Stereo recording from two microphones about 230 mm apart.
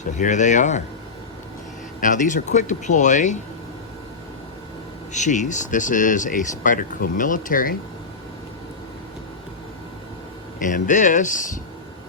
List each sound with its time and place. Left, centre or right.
0.0 s speech: left
2.0 s speech: left
5.1 s speech: left
10.6 s speech: left